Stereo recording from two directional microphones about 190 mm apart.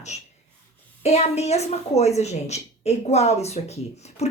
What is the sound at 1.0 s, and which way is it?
A woman's voice, 35° left (ahead or behind).